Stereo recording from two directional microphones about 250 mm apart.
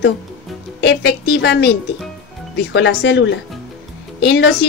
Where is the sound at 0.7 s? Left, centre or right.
Left.